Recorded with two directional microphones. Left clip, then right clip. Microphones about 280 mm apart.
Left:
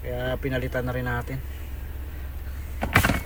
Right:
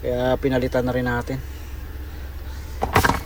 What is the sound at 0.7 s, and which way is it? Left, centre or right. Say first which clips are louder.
Speech: right 6 dB; centre.